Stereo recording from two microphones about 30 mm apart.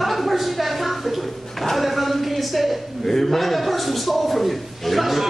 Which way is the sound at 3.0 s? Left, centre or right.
Centre.